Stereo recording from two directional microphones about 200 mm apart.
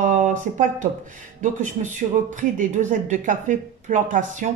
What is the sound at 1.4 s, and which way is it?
Speech, 40° right (ahead or behind).